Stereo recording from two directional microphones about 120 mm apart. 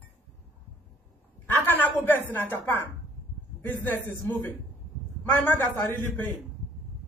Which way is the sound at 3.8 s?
15° left (ahead or behind).